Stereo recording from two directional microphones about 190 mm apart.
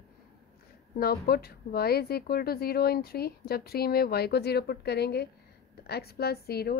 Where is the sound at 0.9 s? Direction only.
55° left (ahead or behind).